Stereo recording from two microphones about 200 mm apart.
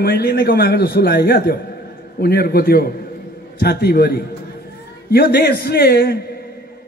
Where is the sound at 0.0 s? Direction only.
50° left (ahead or behind).